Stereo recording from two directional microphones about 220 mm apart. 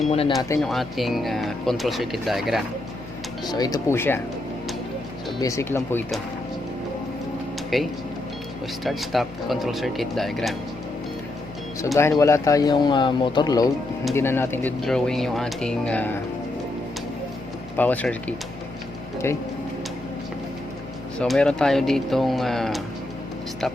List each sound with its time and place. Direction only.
0.1 s speech: 25° left (ahead or behind)
0.6 s speech: centre (ahead or behind)
3.4 s speech: 15° left (ahead or behind)
5.4 s speech: 15° left (ahead or behind)
7.7 s speech: centre (ahead or behind)
11.9 s speech: 10° left (ahead or behind)
17.7 s speech: 5° left (ahead or behind)
21.2 s speech: 5° left (ahead or behind)